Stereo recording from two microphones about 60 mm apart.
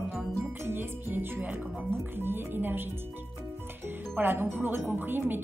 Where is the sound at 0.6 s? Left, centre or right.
Right.